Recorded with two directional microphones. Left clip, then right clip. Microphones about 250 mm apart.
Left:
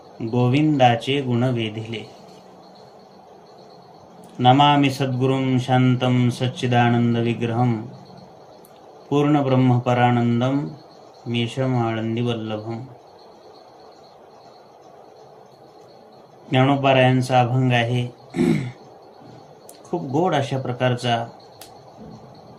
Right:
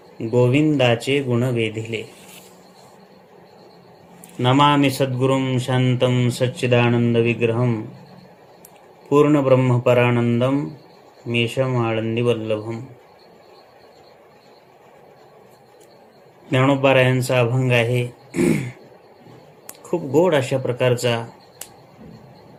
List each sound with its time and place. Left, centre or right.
0.3 s speech: right
4.4 s speech: right
9.1 s speech: right
16.5 s speech: right
20.2 s speech: right